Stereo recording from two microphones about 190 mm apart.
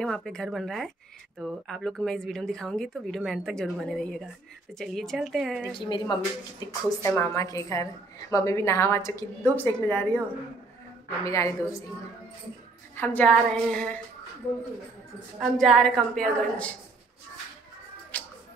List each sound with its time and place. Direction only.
0.0 s speech: 5° left (ahead or behind)
5.8 s a woman's voice: 25° left (ahead or behind)
11.2 s a woman's voice: 15° left (ahead or behind)
12.9 s a woman's voice: 10° left (ahead or behind)
15.3 s speech: centre (ahead or behind)
18.1 s music: 10° left (ahead or behind)